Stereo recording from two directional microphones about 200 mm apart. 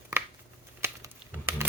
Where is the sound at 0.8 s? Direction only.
10° right (ahead or behind).